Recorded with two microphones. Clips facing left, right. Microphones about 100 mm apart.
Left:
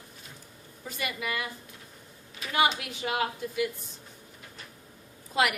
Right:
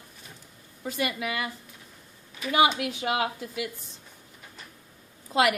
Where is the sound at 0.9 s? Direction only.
90° right.